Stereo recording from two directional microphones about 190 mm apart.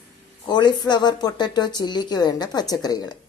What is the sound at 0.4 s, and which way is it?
Speech, 20° left (ahead or behind).